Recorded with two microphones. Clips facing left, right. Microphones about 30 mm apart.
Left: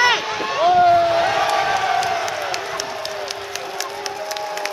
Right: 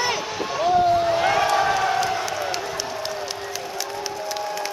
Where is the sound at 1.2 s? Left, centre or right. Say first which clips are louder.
Left 2 dB; left.